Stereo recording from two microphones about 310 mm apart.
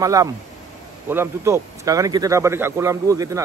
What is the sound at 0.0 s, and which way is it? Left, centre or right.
A man's voice, centre.